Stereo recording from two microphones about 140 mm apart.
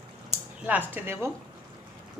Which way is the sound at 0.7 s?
15° right (ahead or behind).